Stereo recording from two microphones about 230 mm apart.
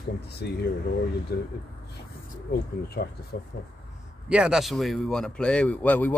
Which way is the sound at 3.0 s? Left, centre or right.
Left.